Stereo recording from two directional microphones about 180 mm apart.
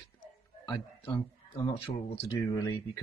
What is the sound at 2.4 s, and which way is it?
Speech, 20° left (ahead or behind).